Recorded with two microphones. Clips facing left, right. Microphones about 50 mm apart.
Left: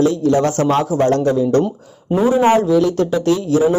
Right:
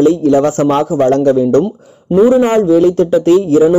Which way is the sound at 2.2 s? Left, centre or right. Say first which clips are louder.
Right 4 dB; centre.